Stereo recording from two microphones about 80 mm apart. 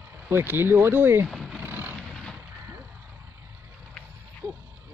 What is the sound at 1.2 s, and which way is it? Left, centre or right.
Vehicle, centre.